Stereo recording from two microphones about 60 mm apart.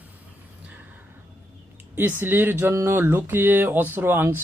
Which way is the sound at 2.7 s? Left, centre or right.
Right.